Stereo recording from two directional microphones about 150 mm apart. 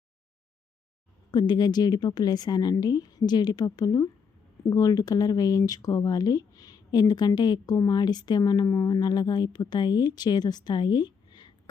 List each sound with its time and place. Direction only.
1.3 s speech: 30° left (ahead or behind)